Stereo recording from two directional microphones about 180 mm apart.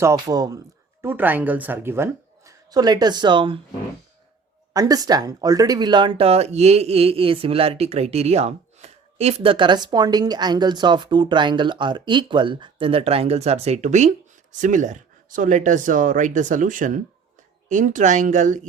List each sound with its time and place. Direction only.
0.0 s speech: 20° right (ahead or behind)
4.7 s speech: 20° right (ahead or behind); by 18.6 s 45° right (ahead or behind)